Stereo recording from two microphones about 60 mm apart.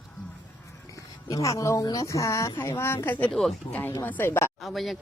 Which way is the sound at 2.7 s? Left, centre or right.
Left.